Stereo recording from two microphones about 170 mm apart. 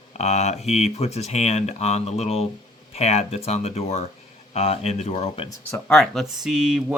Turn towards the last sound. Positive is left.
turn(degrees=-5)  # may be behind; listen again after turning